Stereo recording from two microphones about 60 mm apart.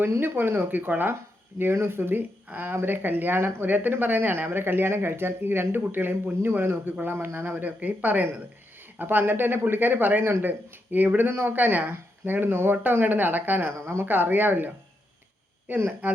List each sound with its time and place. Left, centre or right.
0.2 s speech: right
16.0 s speech: right